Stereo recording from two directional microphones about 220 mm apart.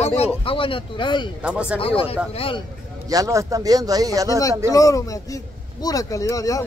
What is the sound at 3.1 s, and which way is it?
Speech, 15° right (ahead or behind).